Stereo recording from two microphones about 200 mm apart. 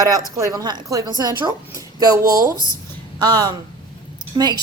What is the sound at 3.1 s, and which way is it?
Speech, 20° right (ahead or behind).